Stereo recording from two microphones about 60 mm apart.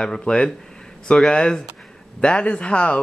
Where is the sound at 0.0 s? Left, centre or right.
Centre.